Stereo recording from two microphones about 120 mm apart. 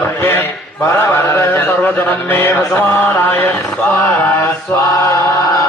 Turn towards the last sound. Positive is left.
turn(degrees=25)  # may be behind; listen again after turning